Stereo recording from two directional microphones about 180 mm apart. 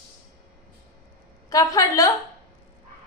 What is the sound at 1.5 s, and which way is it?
Speech, 20° left (ahead or behind).